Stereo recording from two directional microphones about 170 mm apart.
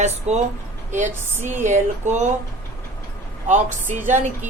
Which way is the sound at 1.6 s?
45° right (ahead or behind).